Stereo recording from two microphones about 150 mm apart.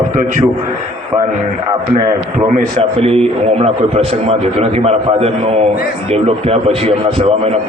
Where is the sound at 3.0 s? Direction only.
40° right (ahead or behind).